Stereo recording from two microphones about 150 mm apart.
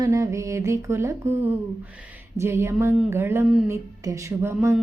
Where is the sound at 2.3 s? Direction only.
20° right (ahead or behind).